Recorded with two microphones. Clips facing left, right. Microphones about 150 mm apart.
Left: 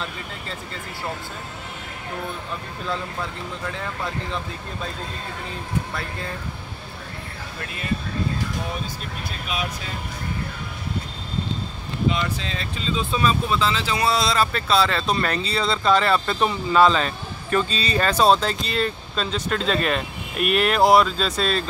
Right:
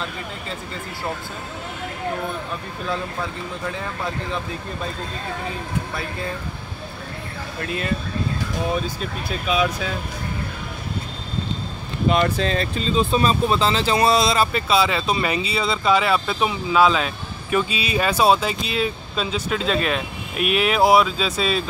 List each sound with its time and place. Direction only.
12.1 s speech: 50° right (ahead or behind); by 14.1 s 30° right (ahead or behind)
14.1 s speech: 15° right (ahead or behind)